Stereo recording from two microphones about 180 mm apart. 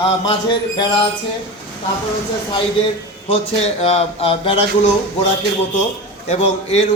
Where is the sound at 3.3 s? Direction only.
35° left (ahead or behind).